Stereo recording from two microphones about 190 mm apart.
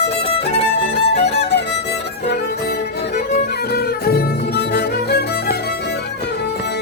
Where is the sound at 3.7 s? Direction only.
55° left (ahead or behind).